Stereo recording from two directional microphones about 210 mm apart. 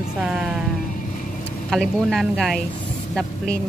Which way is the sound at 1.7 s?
Centre (ahead or behind).